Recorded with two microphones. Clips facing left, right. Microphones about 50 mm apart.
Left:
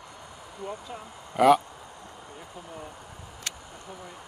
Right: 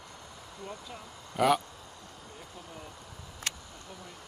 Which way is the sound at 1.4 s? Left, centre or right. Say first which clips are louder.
Left 7 dB; centre.